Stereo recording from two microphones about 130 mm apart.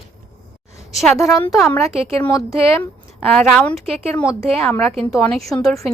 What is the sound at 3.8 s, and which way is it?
Speech, 50° right (ahead or behind).